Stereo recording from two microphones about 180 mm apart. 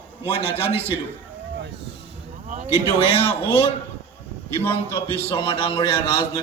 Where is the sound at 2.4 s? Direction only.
45° right (ahead or behind).